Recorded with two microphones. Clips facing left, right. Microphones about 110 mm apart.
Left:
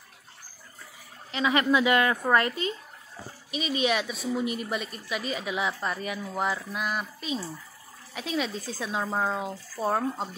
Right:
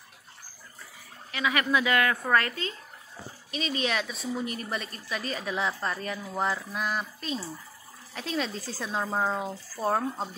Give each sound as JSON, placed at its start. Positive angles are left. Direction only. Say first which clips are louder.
{"t": 1.3, "sound": "a woman's voice", "louder": "left 3 dB", "side_deg": 25}